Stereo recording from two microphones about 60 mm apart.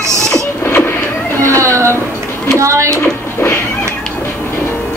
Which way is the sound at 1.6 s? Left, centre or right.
Right.